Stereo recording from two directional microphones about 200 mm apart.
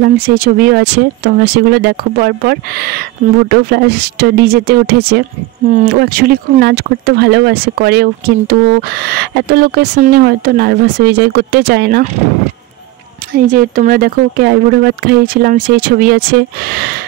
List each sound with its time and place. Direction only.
0.0 s speech: 45° right (ahead or behind)
5.7 s speech: 45° right (ahead or behind)
13.3 s speech: 45° right (ahead or behind)